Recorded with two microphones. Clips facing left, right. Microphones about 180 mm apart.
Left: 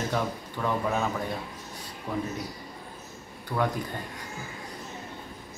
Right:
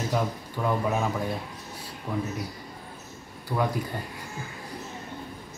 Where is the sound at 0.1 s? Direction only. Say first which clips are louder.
Right 2 dB; 10° right (ahead or behind).